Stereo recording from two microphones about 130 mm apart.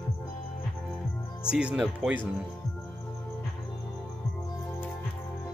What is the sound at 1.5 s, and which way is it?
Speech, 10° right (ahead or behind).